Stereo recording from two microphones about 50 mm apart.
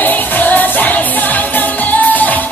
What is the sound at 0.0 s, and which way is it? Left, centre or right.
Music, left.